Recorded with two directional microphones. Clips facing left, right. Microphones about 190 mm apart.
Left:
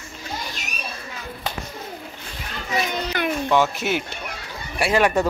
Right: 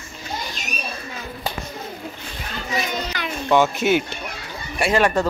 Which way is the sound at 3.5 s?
Centre (ahead or behind).